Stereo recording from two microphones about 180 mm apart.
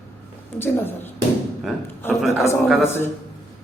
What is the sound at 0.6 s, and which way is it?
A man's voice, 10° left (ahead or behind).